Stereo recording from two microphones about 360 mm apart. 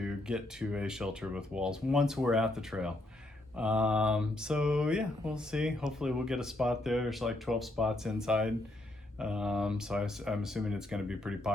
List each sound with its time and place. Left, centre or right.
0.0 s speech: centre